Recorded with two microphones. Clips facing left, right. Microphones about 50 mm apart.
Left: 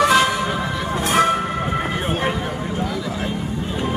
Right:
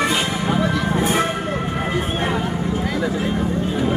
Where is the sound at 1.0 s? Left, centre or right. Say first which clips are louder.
Left 4 dB; left.